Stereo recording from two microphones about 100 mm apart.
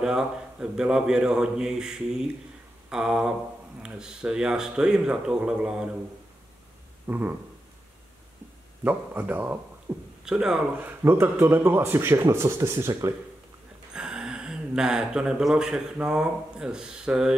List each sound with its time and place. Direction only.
0.0 s a man's voice: 5° right (ahead or behind)
7.1 s speech: 20° right (ahead or behind)
8.8 s speech: 20° right (ahead or behind)
10.2 s a man's voice: 5° right (ahead or behind)
10.8 s speech: 20° right (ahead or behind)
13.9 s speech: 10° right (ahead or behind)